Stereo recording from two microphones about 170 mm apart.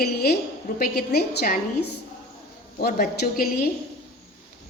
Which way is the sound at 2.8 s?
60° left (ahead or behind).